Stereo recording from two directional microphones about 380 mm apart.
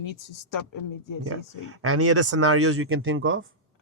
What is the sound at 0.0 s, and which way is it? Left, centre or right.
Speech, left.